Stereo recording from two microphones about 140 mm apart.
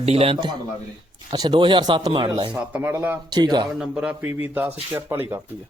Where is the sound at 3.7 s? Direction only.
10° right (ahead or behind).